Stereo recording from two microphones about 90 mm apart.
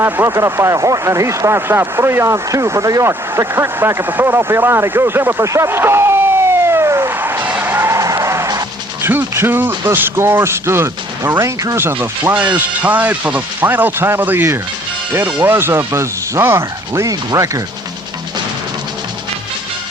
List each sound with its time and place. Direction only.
0.0 s speech: 30° right (ahead or behind)
7.2 s music: 20° right (ahead or behind); by 8.6 s 35° right (ahead or behind)
9.0 s speech: 25° right (ahead or behind)
12.5 s speech: 20° right (ahead or behind); by 17.6 s 35° right (ahead or behind)